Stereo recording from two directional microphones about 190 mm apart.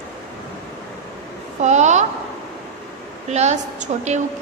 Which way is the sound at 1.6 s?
40° right (ahead or behind).